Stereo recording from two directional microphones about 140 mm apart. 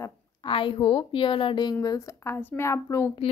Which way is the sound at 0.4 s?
40° left (ahead or behind).